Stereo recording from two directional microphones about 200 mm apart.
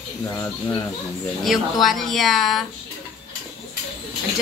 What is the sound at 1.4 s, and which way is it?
Speech, centre (ahead or behind).